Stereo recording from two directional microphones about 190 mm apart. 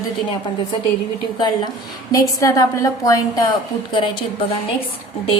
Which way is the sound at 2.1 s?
20° left (ahead or behind).